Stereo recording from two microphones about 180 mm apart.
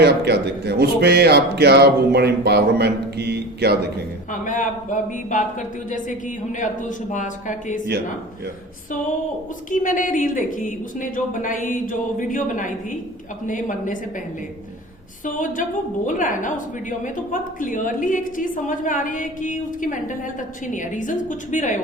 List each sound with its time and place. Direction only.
0.0 s speech: 65° right (ahead or behind)
4.3 s a woman's voice: 45° left (ahead or behind)
9.6 s a woman's voice: 45° left (ahead or behind)
15.2 s a woman's voice: 45° left (ahead or behind)
17.6 s a woman's voice: 50° left (ahead or behind)